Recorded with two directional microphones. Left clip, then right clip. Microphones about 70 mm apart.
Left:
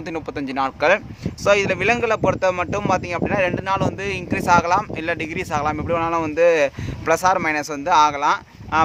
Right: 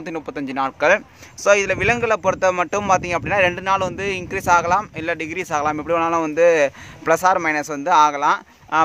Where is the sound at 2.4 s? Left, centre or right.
Right.